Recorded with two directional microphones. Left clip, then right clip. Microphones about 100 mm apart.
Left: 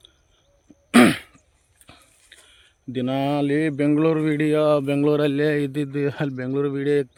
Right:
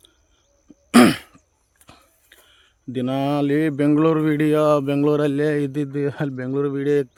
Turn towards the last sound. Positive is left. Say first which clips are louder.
# right 1 dB
turn(degrees=-25)  # may be behind; listen again after turning